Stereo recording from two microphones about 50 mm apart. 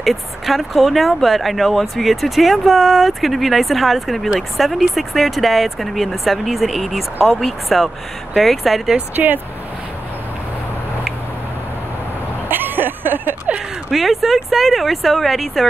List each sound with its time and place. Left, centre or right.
0.0 s speech: centre
9.1 s speech: right
12.4 s a sound: right
13.9 s speech: centre